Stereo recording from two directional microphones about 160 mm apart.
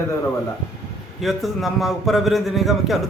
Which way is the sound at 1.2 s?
Centre (ahead or behind).